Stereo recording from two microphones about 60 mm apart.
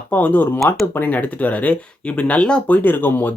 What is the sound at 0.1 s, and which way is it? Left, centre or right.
Speech, left.